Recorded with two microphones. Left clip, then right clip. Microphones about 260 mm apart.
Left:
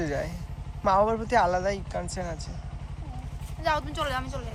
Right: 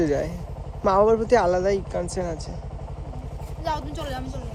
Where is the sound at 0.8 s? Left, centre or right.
Right.